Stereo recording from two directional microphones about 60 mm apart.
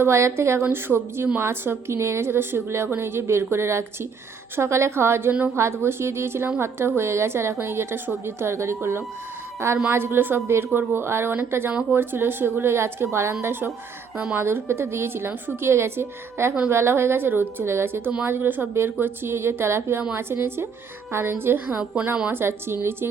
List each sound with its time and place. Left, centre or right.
0.0 s a woman's voice: right
9.9 s a woman's voice: right
11.7 s a woman's voice: centre
11.9 s a woman's voice: right
13.4 s a woman's voice: right